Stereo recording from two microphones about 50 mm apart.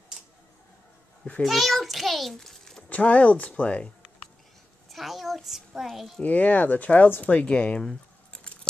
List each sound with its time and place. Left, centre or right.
1.4 s a child's voice: centre
2.9 s speech: left
4.8 s a child's voice: centre
6.2 s speech: left